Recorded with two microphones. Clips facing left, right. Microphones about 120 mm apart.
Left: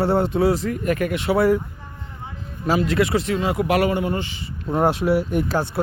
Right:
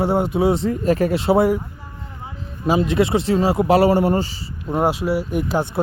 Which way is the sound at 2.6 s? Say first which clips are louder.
Right 2 dB; 20° right (ahead or behind).